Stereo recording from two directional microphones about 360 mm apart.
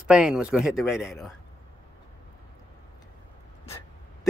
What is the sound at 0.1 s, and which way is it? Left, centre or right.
Speech, centre.